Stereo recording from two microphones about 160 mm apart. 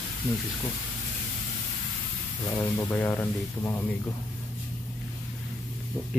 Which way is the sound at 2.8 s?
20° left (ahead or behind).